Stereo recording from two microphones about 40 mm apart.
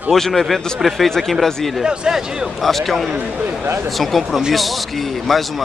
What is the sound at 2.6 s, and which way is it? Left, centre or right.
A man's voice, centre.